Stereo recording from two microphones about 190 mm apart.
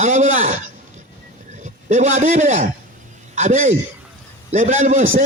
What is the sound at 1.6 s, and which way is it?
A man's voice, 35° right (ahead or behind).